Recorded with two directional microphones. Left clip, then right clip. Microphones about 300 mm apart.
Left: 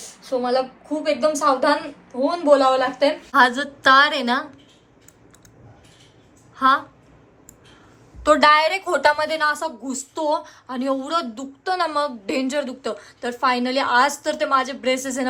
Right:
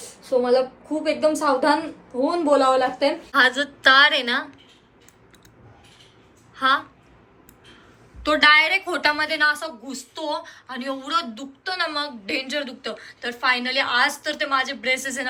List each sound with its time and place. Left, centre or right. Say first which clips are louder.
0.0 s a woman's voice: right 2 dB; centre
3.3 s a woman's voice: left 1 dB; left
6.6 s a woman's voice: left 3 dB; left
8.2 s a woman's voice: left 1 dB; left